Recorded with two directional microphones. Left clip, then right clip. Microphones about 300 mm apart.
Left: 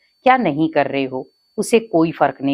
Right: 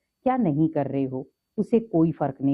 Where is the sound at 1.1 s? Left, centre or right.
Centre.